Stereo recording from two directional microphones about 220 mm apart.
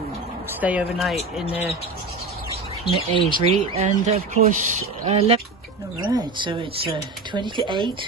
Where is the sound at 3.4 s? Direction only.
25° right (ahead or behind).